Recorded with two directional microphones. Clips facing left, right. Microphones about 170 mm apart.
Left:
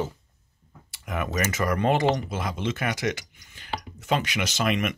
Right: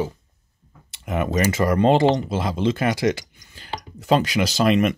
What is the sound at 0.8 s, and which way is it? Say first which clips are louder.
Speech: right 6 dB; 25° right (ahead or behind).